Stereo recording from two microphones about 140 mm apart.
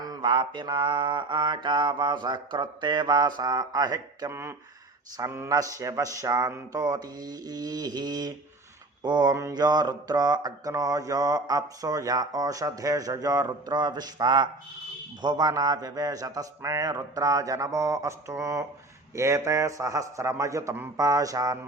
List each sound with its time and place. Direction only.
0.0 s mantra: 30° right (ahead or behind)